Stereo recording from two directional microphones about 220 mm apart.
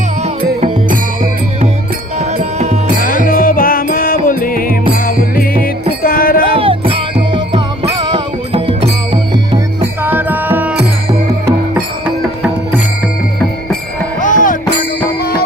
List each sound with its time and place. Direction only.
0.2 s music: 35° right (ahead or behind)
3.2 s music: 40° left (ahead or behind)
6.6 s music: 25° right (ahead or behind)
10.0 s music: 10° right (ahead or behind)
14.2 s music: 35° left (ahead or behind)